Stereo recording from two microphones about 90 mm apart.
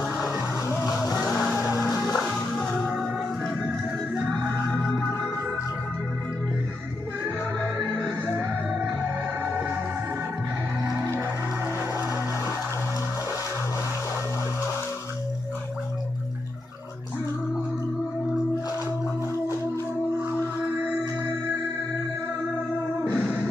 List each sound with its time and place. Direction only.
0.0 s music: 10° right (ahead or behind)
3.6 s music: 15° right (ahead or behind)
7.8 s music: 10° left (ahead or behind)
11.1 s music: 15° right (ahead or behind)
23.1 s music: 10° right (ahead or behind)